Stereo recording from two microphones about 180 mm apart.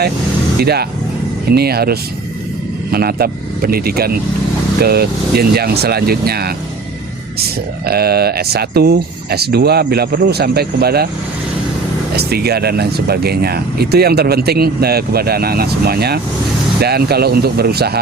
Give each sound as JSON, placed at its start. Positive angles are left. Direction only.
{"t": 0.6, "sound": "speech", "side_deg": -60}
{"t": 7.9, "sound": "speech", "side_deg": -60}
{"t": 12.1, "sound": "speech", "side_deg": -60}